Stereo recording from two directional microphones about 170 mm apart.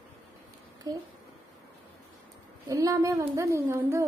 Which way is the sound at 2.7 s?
20° right (ahead or behind).